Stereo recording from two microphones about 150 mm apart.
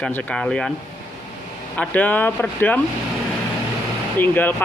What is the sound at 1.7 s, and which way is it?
Speech, 10° left (ahead or behind).